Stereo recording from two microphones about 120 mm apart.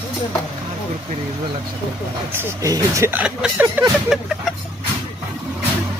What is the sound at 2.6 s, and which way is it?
Speech, 25° right (ahead or behind).